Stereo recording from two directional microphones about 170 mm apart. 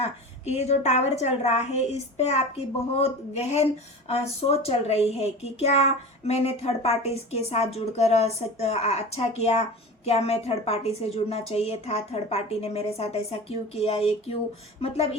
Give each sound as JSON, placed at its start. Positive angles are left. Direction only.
{"t": 0.0, "sound": "a woman's voice", "side_deg": 40}